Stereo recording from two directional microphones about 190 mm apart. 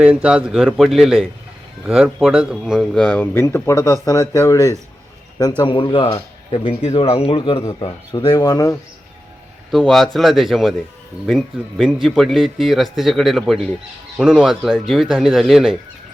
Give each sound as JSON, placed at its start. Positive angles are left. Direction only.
{"t": 0.0, "sound": "a man's voice", "side_deg": -5}
{"t": 7.6, "sound": "speech", "side_deg": 15}
{"t": 9.7, "sound": "speech", "side_deg": 0}